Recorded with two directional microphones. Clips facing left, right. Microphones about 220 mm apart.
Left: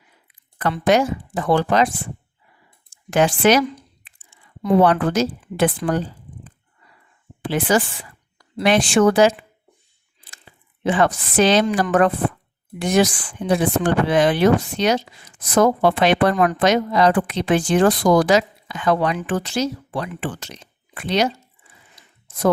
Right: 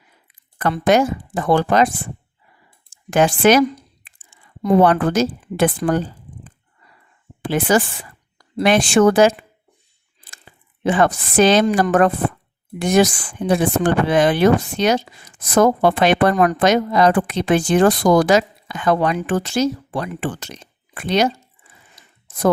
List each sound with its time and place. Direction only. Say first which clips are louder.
0.6 s speech: right 2 dB; 50° right (ahead or behind)
3.1 s speech: right 2 dB; 50° right (ahead or behind)
7.4 s speech: right 2 dB; 45° right (ahead or behind)
10.8 s speech: right 2 dB; 50° right (ahead or behind)